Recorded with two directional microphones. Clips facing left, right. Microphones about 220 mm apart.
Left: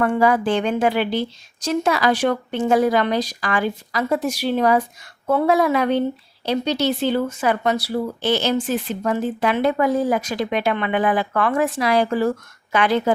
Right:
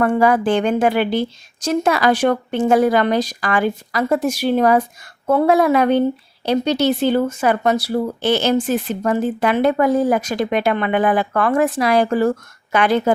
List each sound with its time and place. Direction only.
0.0 s speech: 50° right (ahead or behind)